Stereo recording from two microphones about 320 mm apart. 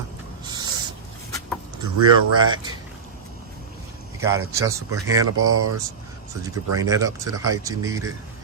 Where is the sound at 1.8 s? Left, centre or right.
Centre.